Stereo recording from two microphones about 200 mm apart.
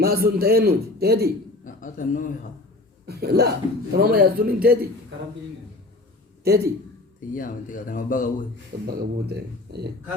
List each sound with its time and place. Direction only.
0.0 s a man's voice: 50° right (ahead or behind)
1.6 s a man's voice: 40° left (ahead or behind)
3.1 s a man's voice: 50° right (ahead or behind)
6.4 s a man's voice: 50° right (ahead or behind)
7.3 s speech: 40° left (ahead or behind)
8.9 s speech: 55° right (ahead or behind)